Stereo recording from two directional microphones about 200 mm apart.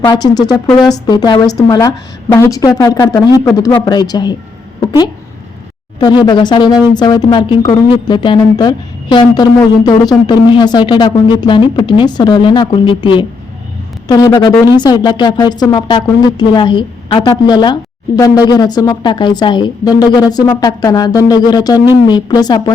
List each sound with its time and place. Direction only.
0.0 s speech: 20° left (ahead or behind)
6.2 s speech: 20° left (ahead or behind)